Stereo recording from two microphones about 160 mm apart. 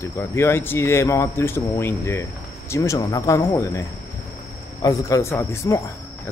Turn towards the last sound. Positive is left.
turn(degrees=20)  # may be behind; listen again after turning